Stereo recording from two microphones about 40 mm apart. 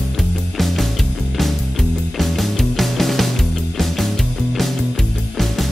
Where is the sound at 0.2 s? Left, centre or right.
Centre.